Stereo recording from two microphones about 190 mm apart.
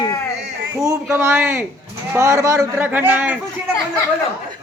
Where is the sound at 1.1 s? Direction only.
10° right (ahead or behind).